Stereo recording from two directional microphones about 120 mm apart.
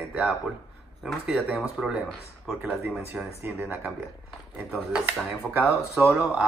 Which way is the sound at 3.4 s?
15° right (ahead or behind).